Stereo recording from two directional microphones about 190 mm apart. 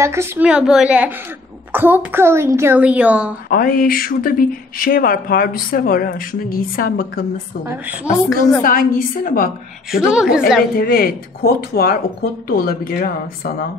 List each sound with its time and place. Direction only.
0.0 s a woman's voice: 15° right (ahead or behind)
3.4 s speech: 50° left (ahead or behind)
7.6 s a woman's voice: 10° right (ahead or behind)
8.6 s speech: 45° left (ahead or behind)
9.8 s a woman's voice: centre (ahead or behind)
10.8 s speech: 50° left (ahead or behind)